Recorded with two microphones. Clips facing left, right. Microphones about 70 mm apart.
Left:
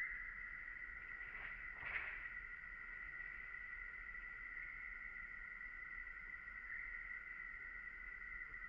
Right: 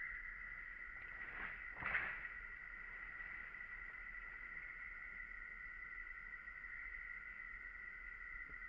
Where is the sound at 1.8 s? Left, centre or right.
Right.